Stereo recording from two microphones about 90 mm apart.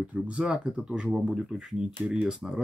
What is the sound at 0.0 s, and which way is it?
Speech, 15° right (ahead or behind).